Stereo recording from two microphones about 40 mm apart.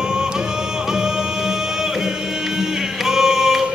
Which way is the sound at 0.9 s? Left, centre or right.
Centre.